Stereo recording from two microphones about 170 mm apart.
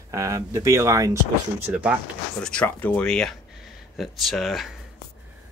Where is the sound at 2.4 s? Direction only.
5° left (ahead or behind).